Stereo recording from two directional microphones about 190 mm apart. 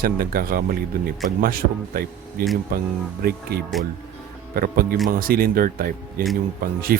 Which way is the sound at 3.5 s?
55° right (ahead or behind).